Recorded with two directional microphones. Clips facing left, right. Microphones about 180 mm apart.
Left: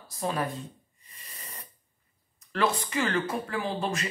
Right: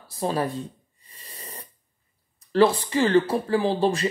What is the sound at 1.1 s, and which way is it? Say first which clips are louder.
Hiss: right 5 dB; 30° right (ahead or behind).